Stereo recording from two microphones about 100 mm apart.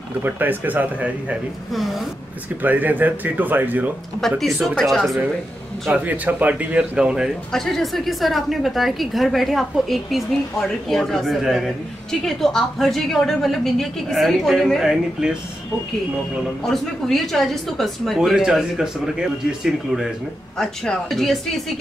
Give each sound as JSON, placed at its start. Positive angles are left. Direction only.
{"t": 0.2, "sound": "speech", "side_deg": -20}
{"t": 1.7, "sound": "a woman's voice", "side_deg": 0}
{"t": 2.6, "sound": "speech", "side_deg": -15}
{"t": 4.4, "sound": "a woman's voice", "side_deg": 0}
{"t": 5.9, "sound": "speech", "side_deg": -15}
{"t": 7.5, "sound": "a woman's voice", "side_deg": 5}
{"t": 16.6, "sound": "a woman's voice", "side_deg": 5}